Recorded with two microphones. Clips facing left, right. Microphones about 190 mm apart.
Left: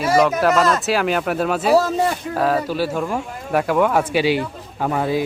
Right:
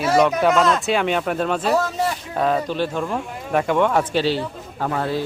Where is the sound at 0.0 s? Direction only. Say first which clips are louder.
Left 1 dB; 5° left (ahead or behind).